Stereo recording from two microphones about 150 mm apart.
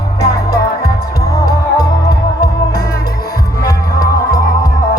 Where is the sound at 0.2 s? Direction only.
90° left.